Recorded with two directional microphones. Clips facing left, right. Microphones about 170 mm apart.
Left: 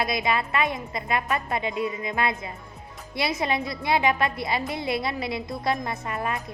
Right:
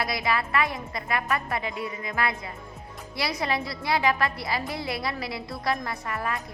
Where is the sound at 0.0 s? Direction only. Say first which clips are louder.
Left 2 dB; 20° left (ahead or behind).